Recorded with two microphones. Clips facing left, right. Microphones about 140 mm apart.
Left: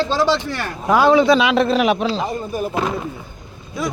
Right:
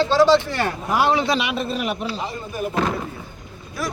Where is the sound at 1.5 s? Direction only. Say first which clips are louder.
Left 9 dB; 90° left.